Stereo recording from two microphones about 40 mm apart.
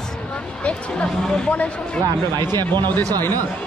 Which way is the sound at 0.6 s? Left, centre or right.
Left.